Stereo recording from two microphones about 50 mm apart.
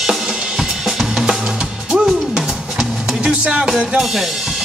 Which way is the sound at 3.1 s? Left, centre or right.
Centre.